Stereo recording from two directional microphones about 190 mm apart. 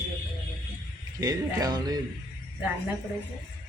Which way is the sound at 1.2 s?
20° right (ahead or behind).